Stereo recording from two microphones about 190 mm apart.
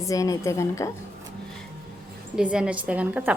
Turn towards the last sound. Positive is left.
turn(degrees=-5)  # may be behind; listen again after turning